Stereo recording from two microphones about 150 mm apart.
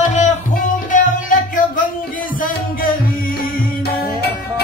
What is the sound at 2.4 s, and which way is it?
Music, 70° left (ahead or behind).